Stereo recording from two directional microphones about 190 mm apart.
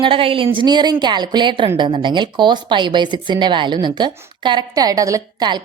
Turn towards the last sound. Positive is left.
turn(degrees=-20)  # may be behind; listen again after turning